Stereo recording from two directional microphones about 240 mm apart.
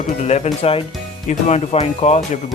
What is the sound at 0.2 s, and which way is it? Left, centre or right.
Speech, left.